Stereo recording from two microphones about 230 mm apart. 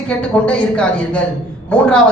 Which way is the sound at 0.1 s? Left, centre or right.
Centre.